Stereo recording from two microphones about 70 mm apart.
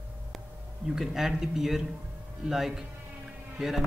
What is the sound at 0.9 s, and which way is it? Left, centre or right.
Speech, centre.